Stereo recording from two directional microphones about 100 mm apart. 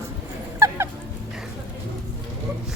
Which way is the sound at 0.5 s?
25° right (ahead or behind).